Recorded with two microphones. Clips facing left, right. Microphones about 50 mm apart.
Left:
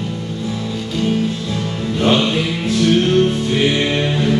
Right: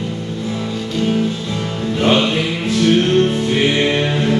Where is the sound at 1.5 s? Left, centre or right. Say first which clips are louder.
Even; centre.